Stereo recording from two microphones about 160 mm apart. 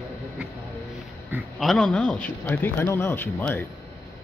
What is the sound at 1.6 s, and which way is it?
A man's voice, centre (ahead or behind).